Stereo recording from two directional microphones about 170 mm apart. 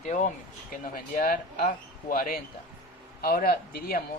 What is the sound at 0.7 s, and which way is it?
Speech, 55° left (ahead or behind).